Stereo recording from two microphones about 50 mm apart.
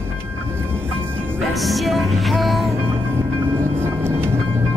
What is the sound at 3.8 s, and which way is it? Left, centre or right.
Train, right.